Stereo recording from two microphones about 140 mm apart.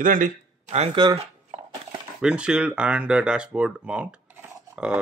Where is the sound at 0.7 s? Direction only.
45° right (ahead or behind).